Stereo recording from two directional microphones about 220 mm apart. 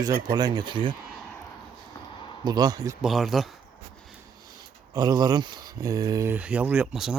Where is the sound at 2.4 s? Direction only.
15° right (ahead or behind).